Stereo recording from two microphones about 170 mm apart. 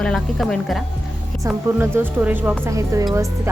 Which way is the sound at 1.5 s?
10° right (ahead or behind).